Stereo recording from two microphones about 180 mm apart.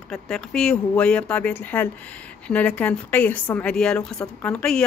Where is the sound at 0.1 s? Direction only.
5° left (ahead or behind).